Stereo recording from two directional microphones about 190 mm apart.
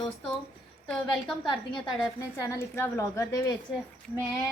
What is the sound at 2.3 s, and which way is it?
A woman's voice, 15° left (ahead or behind).